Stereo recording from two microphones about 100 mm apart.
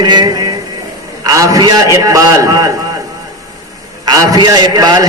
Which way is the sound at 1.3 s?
35° right (ahead or behind).